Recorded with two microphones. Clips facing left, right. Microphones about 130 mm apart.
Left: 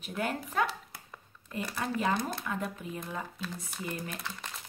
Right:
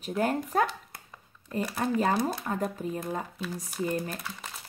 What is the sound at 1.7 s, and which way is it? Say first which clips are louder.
Speech: right 4 dB; 40° right (ahead or behind).